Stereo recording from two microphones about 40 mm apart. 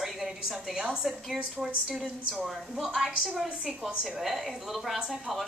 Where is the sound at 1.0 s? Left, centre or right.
Centre.